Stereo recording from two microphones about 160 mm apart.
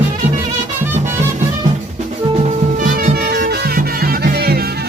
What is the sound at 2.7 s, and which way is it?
Music, 60° right (ahead or behind).